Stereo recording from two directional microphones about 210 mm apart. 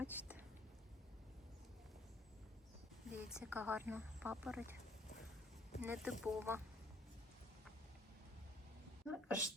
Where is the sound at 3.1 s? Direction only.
5° right (ahead or behind).